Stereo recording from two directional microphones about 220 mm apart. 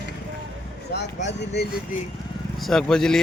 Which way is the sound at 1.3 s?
50° left (ahead or behind).